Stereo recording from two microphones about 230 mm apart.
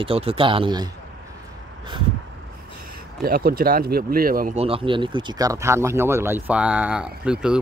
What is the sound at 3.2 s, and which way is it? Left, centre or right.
Speech, right.